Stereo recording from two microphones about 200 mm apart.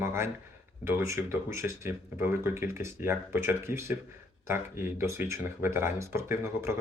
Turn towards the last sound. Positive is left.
turn(degrees=-15)  # may be behind; listen again after turning